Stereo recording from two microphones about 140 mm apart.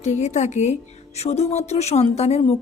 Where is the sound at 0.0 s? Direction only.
55° left (ahead or behind).